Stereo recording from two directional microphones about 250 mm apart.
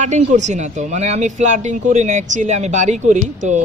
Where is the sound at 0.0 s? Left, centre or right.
Right.